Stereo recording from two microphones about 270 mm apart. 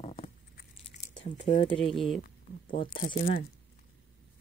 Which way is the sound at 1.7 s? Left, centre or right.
Centre.